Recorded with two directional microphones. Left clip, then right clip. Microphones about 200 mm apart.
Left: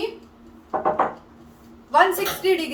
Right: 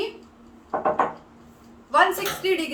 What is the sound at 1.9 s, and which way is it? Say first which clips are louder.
Speech: left 2 dB; 15° right (ahead or behind).